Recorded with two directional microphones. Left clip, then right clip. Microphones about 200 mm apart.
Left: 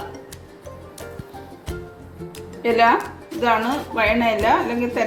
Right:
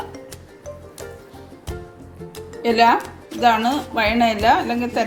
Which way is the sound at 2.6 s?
45° right (ahead or behind).